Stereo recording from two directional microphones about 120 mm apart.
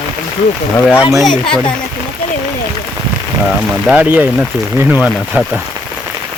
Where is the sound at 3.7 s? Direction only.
10° right (ahead or behind).